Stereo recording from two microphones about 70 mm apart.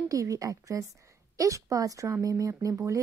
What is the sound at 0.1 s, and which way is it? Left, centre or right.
A woman's voice, right.